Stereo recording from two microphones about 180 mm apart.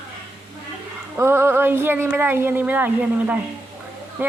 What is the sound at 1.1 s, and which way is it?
A woman's voice, 15° right (ahead or behind).